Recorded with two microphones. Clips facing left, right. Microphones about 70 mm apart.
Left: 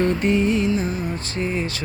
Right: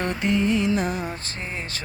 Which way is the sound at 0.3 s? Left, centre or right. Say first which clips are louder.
Right 2 dB; left.